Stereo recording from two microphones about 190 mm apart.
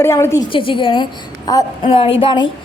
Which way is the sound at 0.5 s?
25° left (ahead or behind).